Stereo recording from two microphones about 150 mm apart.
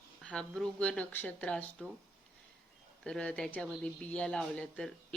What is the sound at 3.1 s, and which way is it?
A woman's voice, 5° left (ahead or behind).